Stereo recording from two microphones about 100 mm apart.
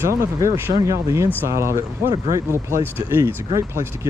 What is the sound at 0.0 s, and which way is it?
Speech, 30° right (ahead or behind).